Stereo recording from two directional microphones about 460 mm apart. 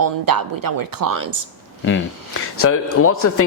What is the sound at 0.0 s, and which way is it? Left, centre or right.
Speech, right.